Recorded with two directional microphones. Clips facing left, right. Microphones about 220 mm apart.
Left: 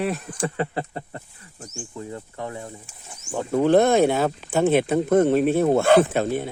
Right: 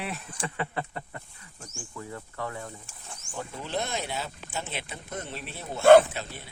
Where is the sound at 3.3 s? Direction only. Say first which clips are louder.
Left 16 dB; 50° left (ahead or behind).